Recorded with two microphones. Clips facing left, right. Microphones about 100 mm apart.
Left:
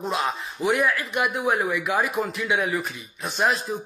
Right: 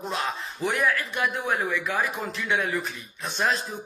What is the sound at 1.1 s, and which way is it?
Speech, 15° left (ahead or behind).